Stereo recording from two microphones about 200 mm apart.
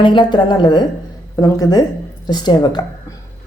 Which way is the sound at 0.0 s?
25° left (ahead or behind).